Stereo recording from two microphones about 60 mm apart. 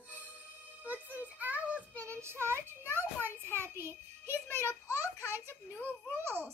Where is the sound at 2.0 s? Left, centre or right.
Right.